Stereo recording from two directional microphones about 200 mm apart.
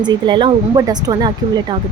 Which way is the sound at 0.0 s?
20° right (ahead or behind).